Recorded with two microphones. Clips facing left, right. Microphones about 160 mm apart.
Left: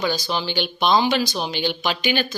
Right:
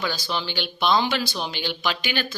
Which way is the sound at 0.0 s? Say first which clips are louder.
Left 4 dB; 15° left (ahead or behind).